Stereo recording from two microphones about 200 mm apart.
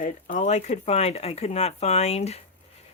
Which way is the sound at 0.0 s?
40° left (ahead or behind).